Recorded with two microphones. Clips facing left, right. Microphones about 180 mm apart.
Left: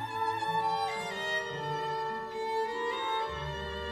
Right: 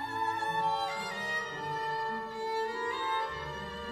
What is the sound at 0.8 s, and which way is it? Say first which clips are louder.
Music: left 2 dB; 25° left (ahead or behind).